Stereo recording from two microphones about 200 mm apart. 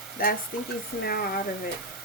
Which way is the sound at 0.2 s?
45° left (ahead or behind).